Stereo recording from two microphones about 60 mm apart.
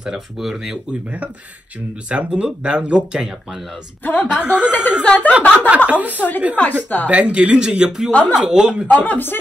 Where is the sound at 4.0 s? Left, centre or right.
Left.